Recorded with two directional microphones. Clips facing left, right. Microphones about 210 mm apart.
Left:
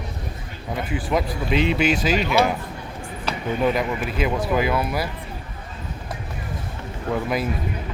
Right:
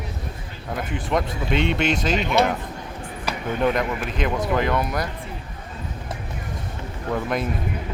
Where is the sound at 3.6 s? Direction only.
5° left (ahead or behind).